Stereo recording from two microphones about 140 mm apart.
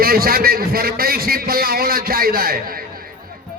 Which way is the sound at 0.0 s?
90° right.